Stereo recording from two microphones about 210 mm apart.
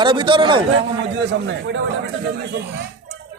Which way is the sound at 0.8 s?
55° right (ahead or behind).